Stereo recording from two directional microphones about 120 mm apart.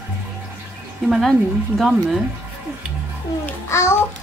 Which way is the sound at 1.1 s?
Centre (ahead or behind).